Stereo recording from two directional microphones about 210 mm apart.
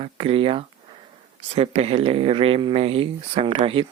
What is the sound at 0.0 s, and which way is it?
Speech, 25° right (ahead or behind).